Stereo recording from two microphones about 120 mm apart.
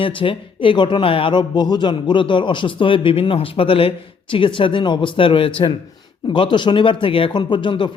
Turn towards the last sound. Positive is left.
turn(degrees=40)  # may be behind; listen again after turning